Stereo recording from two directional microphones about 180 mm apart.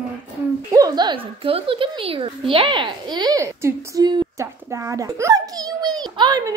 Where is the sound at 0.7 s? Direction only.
20° right (ahead or behind).